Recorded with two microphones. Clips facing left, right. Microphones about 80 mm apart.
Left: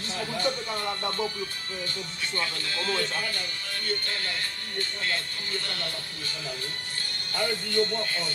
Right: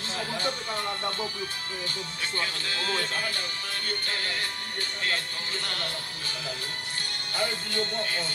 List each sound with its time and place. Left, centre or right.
2.9 s speech: right
7.3 s speech: right